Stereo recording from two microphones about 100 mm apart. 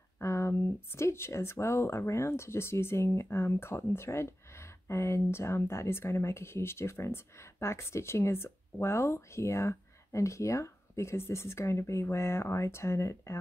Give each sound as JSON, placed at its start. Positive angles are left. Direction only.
{"t": 0.2, "sound": "speech", "side_deg": 30}